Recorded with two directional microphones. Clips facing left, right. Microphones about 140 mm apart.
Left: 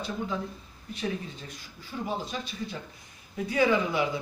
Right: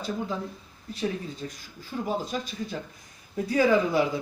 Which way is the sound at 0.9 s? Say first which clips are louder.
Right 2 dB; 35° right (ahead or behind).